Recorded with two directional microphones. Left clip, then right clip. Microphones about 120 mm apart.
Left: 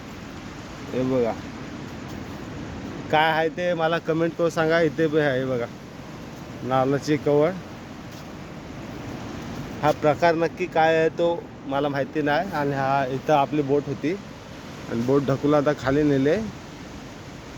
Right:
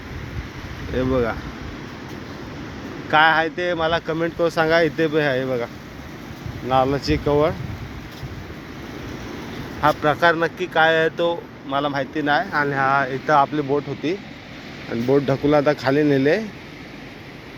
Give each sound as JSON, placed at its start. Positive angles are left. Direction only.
{"t": 0.9, "sound": "speech", "side_deg": 10}
{"t": 3.1, "sound": "speech", "side_deg": 35}
{"t": 4.4, "sound": "speech", "side_deg": 15}
{"t": 6.7, "sound": "speech", "side_deg": 20}
{"t": 9.8, "sound": "speech", "side_deg": 25}
{"t": 11.7, "sound": "speech", "side_deg": 35}
{"t": 13.7, "sound": "speech", "side_deg": 30}
{"t": 15.3, "sound": "speech", "side_deg": 10}